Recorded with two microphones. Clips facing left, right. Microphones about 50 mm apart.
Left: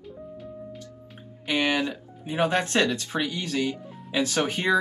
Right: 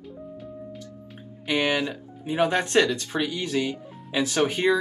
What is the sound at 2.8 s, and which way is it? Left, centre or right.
Speech, left.